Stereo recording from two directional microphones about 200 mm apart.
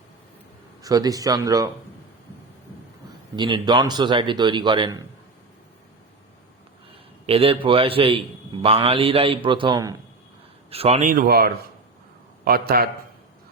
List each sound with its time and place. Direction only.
0.8 s speech: 20° right (ahead or behind)
3.3 s a man's voice: 20° right (ahead or behind)
7.3 s a man's voice: 30° right (ahead or behind)
11.1 s a man's voice: 45° right (ahead or behind)